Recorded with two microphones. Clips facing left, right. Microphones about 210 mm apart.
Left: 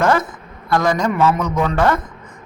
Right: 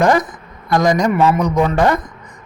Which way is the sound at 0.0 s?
15° right (ahead or behind).